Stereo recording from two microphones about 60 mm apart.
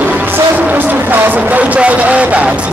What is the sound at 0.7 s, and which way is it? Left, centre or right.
Music, right.